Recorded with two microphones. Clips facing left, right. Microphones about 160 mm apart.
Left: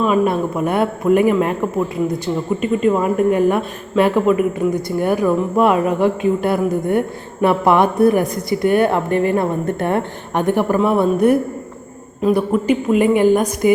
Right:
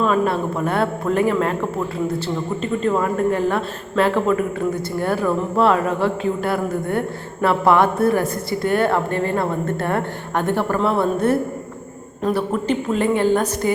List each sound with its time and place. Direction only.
0.0 s a man's voice: 15° left (ahead or behind)